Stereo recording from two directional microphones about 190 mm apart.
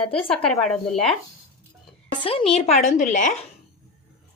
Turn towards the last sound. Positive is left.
turn(degrees=40)  # may be behind; listen again after turning